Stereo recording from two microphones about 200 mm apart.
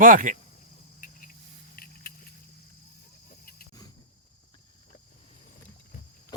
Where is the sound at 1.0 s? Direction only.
40° left (ahead or behind).